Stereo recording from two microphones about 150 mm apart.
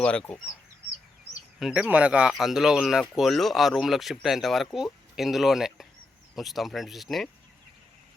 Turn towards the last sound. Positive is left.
turn(degrees=0)  # may be behind; listen again after turning